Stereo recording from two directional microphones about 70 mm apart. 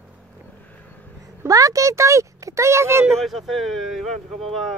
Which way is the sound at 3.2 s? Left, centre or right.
Centre.